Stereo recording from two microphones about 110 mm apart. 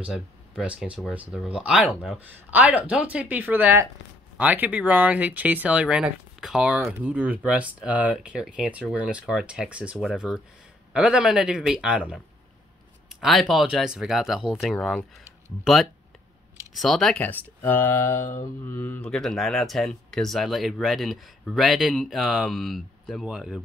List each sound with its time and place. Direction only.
0.0 s speech: 10° right (ahead or behind)
6.9 s speech: 15° right (ahead or behind)
13.2 s speech: centre (ahead or behind)
17.2 s speech: 20° left (ahead or behind); by 23.6 s 5° right (ahead or behind)